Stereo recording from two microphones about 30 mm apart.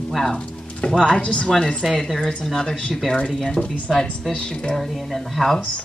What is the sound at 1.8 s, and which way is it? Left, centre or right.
Speech, centre.